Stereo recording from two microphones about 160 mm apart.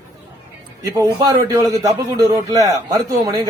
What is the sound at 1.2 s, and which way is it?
A man's voice, 20° right (ahead or behind).